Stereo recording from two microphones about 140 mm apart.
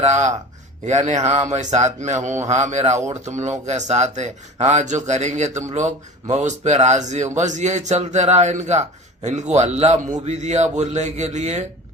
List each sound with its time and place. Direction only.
0.0 s speech: 55° right (ahead or behind)